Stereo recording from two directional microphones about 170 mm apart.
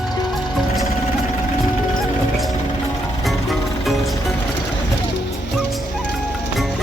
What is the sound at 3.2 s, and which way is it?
Music, centre (ahead or behind).